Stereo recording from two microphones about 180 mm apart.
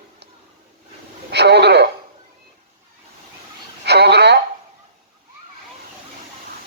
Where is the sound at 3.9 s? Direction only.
70° right (ahead or behind).